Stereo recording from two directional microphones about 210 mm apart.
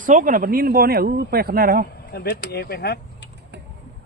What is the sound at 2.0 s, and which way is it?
Speech, 50° left (ahead or behind).